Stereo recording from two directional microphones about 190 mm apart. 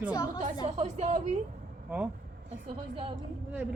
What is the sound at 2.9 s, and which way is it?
Speech, 25° right (ahead or behind).